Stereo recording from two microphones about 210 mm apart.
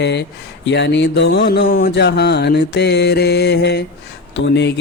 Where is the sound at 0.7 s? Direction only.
55° left (ahead or behind).